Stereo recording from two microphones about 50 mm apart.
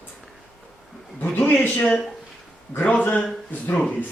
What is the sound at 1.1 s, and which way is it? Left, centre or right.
Speech, left.